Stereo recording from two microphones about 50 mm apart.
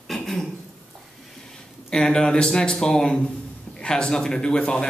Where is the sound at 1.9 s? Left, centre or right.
Centre.